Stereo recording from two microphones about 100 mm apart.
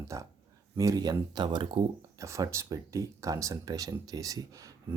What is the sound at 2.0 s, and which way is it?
Speech, 30° right (ahead or behind).